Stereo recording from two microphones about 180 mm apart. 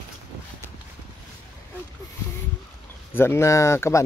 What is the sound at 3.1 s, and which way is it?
Speech, 10° left (ahead or behind).